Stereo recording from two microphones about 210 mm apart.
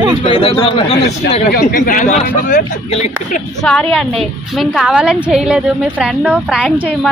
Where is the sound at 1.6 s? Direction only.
40° left (ahead or behind).